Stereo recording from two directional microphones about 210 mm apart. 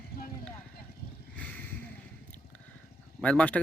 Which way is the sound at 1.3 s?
5° left (ahead or behind).